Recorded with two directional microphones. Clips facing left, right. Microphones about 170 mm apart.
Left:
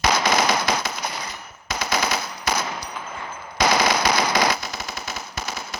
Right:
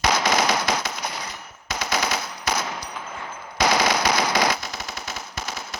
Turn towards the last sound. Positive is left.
turn(degrees=5)  # may be behind; listen again after turning